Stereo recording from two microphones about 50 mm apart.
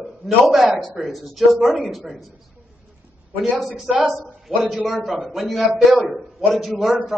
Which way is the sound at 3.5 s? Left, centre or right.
Centre.